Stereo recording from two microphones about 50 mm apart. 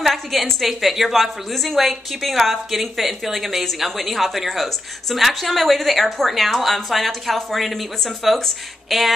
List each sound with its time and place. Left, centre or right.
0.0 s a woman's voice: centre